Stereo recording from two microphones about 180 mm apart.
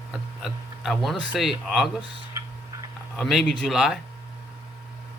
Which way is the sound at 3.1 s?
Centre (ahead or behind).